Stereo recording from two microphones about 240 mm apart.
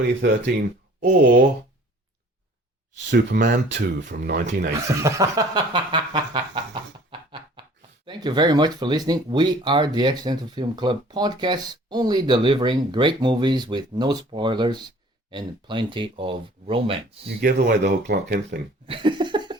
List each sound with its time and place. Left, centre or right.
0.0 s speech: right
3.1 s speech: right
4.9 s speech: centre
7.1 s a sound: centre
8.0 s speech: centre
17.4 s speech: right
18.9 s a sound: right